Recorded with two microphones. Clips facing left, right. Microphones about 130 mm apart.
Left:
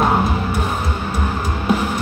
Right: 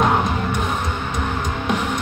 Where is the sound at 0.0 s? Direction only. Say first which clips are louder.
Left 1 dB; 5° left (ahead or behind).